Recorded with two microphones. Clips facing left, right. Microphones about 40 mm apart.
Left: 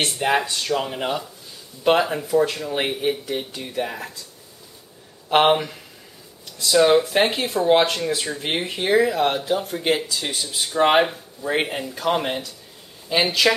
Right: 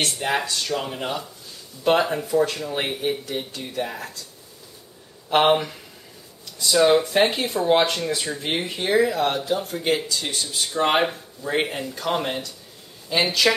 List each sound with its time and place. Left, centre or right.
0.0 s speech: centre
2.0 s speech: centre
5.3 s speech: centre